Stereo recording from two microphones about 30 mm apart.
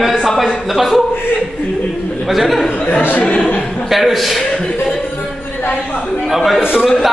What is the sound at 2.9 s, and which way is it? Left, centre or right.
Speech, left.